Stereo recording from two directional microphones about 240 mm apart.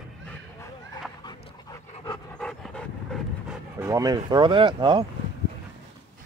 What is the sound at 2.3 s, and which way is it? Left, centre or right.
Dog, centre.